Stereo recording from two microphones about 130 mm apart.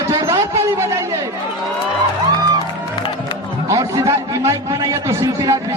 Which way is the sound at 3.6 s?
25° right (ahead or behind).